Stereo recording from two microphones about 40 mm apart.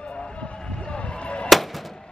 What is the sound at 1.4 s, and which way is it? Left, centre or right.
Music, centre.